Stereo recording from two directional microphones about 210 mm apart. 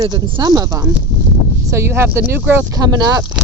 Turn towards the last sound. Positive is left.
turn(degrees=-15)  # may be behind; listen again after turning